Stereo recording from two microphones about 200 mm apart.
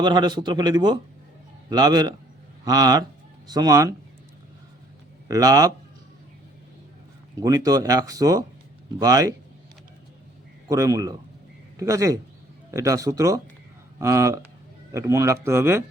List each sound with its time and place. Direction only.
0.0 s speech: 20° right (ahead or behind)
5.3 s speech: 15° right (ahead or behind)
7.4 s speech: 15° right (ahead or behind)
10.7 s speech: 15° right (ahead or behind)